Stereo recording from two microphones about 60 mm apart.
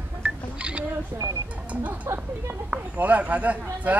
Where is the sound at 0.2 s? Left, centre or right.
Right.